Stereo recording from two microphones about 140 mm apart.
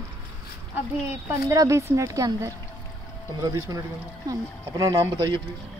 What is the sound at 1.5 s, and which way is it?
Speech, 20° right (ahead or behind).